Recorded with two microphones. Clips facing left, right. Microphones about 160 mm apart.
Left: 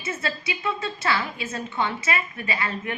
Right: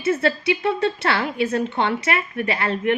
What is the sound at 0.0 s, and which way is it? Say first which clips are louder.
A woman's voice: right 10 dB; 60° right (ahead or behind).